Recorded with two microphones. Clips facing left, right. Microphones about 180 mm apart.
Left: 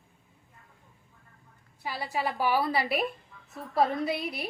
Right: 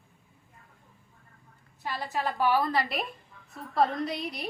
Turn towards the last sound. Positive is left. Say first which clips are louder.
# left 2 dB
turn(degrees=5)  # may be behind; listen again after turning